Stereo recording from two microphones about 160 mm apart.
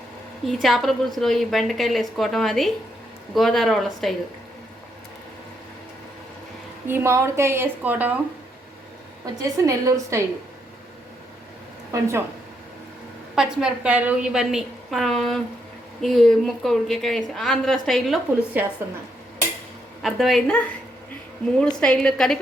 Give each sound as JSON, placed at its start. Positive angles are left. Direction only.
{"t": 0.4, "sound": "a woman's voice", "side_deg": 0}
{"t": 6.8, "sound": "a woman's voice", "side_deg": -15}
{"t": 9.2, "sound": "a woman's voice", "side_deg": -20}
{"t": 11.9, "sound": "a woman's voice", "side_deg": -15}
{"t": 13.3, "sound": "a woman's voice", "side_deg": -5}
{"t": 18.6, "sound": "a woman's voice", "side_deg": -10}
{"t": 20.0, "sound": "a woman's voice", "side_deg": 0}
{"t": 21.8, "sound": "a woman's voice", "side_deg": 5}